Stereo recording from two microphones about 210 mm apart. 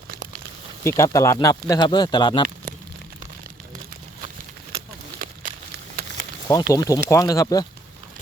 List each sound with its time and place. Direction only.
0.1 s a sound: 45° right (ahead or behind)
0.9 s speech: 15° left (ahead or behind)
6.5 s speech: 15° left (ahead or behind)